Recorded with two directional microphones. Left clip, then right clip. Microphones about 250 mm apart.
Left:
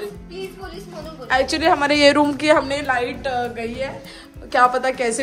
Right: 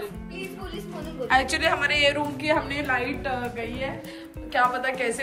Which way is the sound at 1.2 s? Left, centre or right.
Centre.